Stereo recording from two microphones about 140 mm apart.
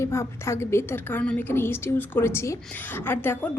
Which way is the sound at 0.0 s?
20° left (ahead or behind).